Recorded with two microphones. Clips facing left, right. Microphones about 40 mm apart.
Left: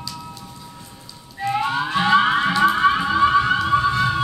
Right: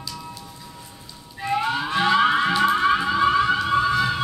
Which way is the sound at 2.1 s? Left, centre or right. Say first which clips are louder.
Left 3 dB; centre.